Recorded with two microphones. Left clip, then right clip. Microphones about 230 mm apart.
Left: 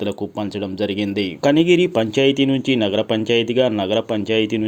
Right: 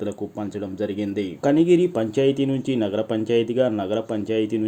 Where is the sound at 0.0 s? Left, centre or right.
Left.